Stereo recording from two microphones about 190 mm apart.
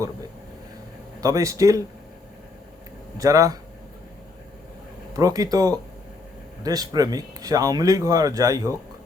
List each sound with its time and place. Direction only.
1.2 s speech: 15° right (ahead or behind)
3.2 s speech: 15° right (ahead or behind)
5.1 s speech: 20° right (ahead or behind)